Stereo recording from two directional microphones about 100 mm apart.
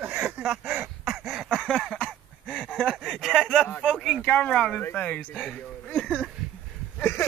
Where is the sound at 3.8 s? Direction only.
5° left (ahead or behind).